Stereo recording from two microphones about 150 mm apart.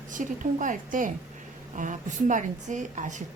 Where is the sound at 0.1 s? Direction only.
60° right (ahead or behind).